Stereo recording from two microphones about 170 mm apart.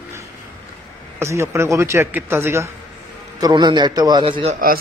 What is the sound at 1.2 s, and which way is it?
A man's voice, 15° right (ahead or behind).